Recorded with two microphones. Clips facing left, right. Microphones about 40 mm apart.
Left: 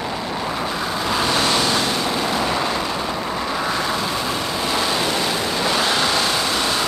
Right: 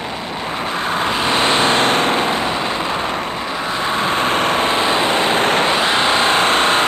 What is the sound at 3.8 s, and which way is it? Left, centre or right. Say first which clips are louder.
Vehicle: right 5 dB; right.